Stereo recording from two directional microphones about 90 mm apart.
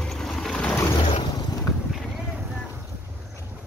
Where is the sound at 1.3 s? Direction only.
45° left (ahead or behind).